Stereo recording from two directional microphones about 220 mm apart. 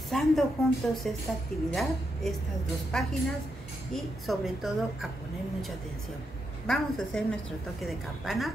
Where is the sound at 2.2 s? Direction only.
Centre (ahead or behind).